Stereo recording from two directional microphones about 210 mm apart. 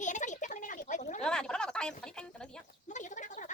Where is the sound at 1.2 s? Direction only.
5° left (ahead or behind).